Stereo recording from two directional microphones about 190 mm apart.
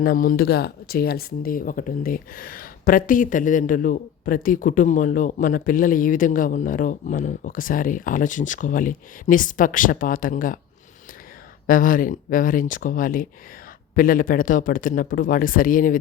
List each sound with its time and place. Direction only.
0.0 s speech: 45° left (ahead or behind)
11.6 s speech: 45° left (ahead or behind)